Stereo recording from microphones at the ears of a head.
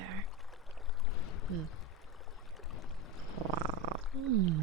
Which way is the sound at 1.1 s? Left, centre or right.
Left.